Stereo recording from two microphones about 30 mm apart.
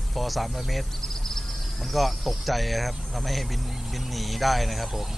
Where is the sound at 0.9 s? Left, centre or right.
Centre.